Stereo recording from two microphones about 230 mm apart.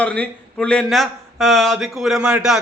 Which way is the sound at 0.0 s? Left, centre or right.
Centre.